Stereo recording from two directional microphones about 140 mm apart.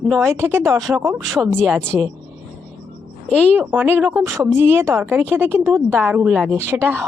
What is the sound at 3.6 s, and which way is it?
Speech, 15° right (ahead or behind).